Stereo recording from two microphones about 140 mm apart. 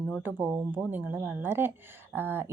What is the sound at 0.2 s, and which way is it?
Speech, 15° right (ahead or behind).